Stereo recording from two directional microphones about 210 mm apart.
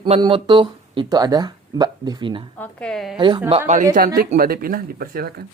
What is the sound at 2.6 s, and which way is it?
Speech, 5° left (ahead or behind).